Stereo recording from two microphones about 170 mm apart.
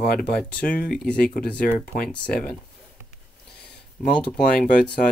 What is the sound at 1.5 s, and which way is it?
Speech, 55° left (ahead or behind).